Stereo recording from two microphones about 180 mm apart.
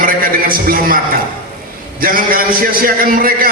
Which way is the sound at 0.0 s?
55° right (ahead or behind).